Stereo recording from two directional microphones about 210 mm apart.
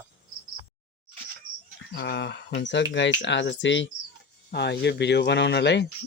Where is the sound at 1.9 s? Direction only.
55° left (ahead or behind).